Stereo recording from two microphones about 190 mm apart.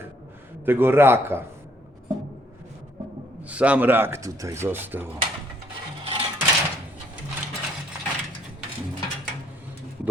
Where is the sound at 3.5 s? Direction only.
5° right (ahead or behind).